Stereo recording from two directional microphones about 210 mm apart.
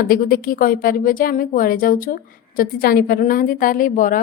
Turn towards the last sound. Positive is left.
turn(degrees=40)  # may be behind; listen again after turning